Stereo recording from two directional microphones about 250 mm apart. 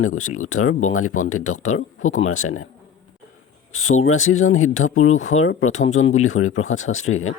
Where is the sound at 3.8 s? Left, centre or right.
Left.